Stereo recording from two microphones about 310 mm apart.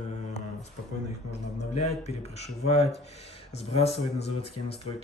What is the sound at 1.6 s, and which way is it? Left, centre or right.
Speech, left.